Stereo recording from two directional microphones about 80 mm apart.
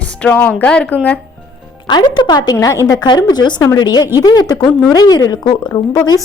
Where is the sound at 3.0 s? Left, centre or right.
Left.